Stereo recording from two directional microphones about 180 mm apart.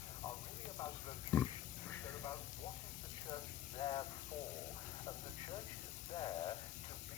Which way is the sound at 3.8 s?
25° left (ahead or behind).